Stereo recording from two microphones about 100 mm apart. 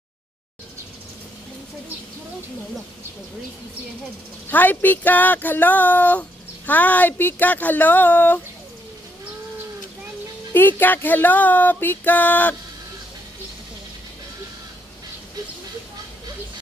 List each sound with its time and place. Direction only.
4.5 s speech: 15° left (ahead or behind)
10.5 s speech: 20° left (ahead or behind)